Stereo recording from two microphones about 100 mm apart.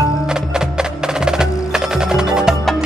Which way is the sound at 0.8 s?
5° right (ahead or behind).